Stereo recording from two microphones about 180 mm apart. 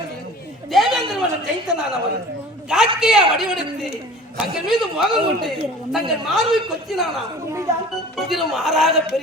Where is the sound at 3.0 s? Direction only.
5° right (ahead or behind).